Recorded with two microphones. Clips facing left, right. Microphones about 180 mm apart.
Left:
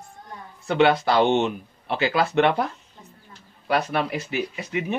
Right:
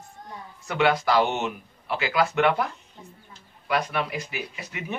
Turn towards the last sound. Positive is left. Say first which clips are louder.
# left 8 dB
turn(degrees=25)  # may be behind; listen again after turning